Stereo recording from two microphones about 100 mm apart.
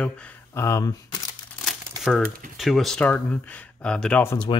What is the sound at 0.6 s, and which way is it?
Speech, 35° left (ahead or behind).